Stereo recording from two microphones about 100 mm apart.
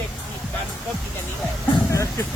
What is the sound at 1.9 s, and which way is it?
Vehicle, 30° left (ahead or behind).